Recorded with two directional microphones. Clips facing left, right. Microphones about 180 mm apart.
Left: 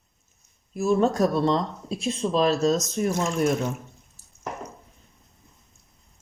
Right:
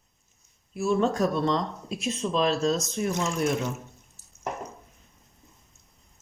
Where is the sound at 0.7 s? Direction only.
40° left (ahead or behind).